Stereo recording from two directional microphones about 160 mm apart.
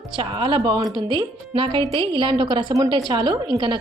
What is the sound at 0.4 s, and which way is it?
Speech, 25° right (ahead or behind).